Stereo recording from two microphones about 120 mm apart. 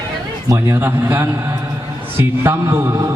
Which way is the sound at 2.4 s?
20° right (ahead or behind).